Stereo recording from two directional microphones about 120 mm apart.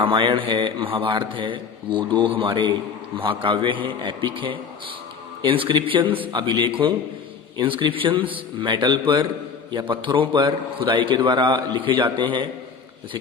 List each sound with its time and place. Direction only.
0.0 s a man's voice: 45° right (ahead or behind)